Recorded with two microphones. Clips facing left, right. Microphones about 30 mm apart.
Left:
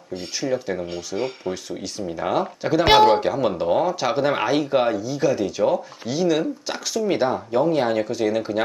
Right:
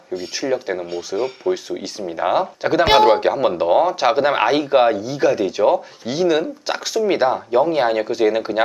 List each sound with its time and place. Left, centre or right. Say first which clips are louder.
0.3 s speech: right 2 dB; centre
0.9 s speech: right 4 dB; centre
1.5 s speech: right 6 dB; centre
2.8 s speech: right 1 dB; centre
3.1 s speech: right 3 dB; right